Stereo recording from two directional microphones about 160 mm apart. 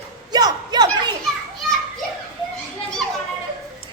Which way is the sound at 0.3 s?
25° right (ahead or behind).